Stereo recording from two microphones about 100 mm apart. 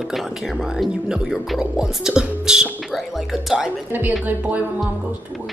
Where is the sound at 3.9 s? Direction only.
20° right (ahead or behind).